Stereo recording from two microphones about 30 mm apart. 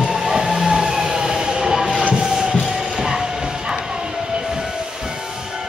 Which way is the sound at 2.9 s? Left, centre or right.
Centre.